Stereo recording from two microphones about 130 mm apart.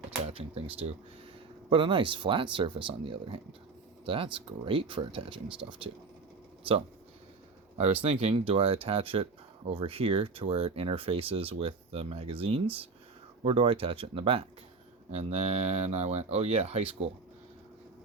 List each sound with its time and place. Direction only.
0.3 s speech: 45° right (ahead or behind)
7.8 s speech: 55° right (ahead or behind)
15.1 s speech: 55° right (ahead or behind)